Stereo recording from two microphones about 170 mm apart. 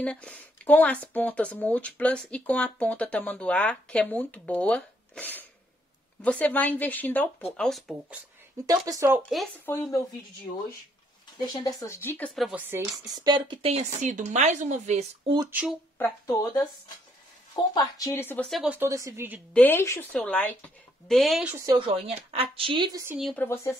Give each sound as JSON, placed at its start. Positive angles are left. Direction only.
{"t": 0.0, "sound": "speech", "side_deg": 5}
{"t": 8.6, "sound": "speech", "side_deg": -20}
{"t": 9.7, "sound": "speech", "side_deg": 15}
{"t": 11.4, "sound": "speech", "side_deg": 20}
{"t": 12.4, "sound": "a woman's voice", "side_deg": -5}
{"t": 15.5, "sound": "speech", "side_deg": -5}
{"t": 16.0, "sound": "a woman's voice", "side_deg": 15}
{"t": 18.5, "sound": "speech", "side_deg": -5}
{"t": 18.9, "sound": "a woman's voice", "side_deg": -20}
{"t": 19.5, "sound": "speech", "side_deg": 10}
{"t": 21.5, "sound": "a woman's voice", "side_deg": -15}
{"t": 21.7, "sound": "a woman's voice", "side_deg": -30}
{"t": 23.3, "sound": "speech", "side_deg": 15}